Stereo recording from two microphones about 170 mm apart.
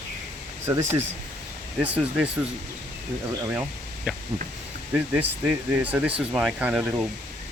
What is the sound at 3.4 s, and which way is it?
Speech, 15° right (ahead or behind).